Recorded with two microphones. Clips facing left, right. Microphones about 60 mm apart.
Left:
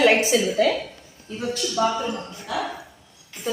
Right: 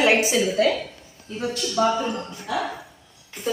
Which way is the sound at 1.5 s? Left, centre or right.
Centre.